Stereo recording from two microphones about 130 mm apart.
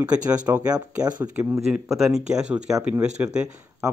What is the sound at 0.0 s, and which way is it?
Speech, 10° right (ahead or behind).